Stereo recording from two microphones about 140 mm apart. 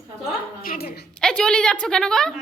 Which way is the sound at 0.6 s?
90° left.